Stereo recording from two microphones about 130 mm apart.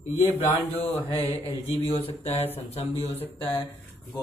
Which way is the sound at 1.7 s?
50° left (ahead or behind).